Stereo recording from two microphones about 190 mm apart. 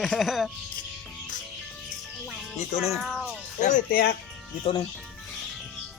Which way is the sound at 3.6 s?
45° left (ahead or behind).